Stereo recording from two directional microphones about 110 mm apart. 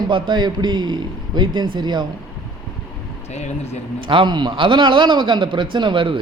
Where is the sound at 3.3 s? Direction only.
85° left.